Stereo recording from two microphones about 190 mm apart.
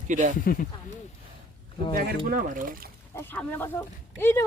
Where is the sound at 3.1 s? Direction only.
10° left (ahead or behind).